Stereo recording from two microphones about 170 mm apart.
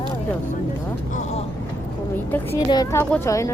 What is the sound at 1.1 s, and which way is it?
Speech, 45° left (ahead or behind).